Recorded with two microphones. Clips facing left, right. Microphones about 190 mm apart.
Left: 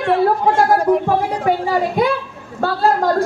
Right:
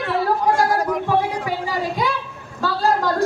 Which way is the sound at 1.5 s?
55° left (ahead or behind).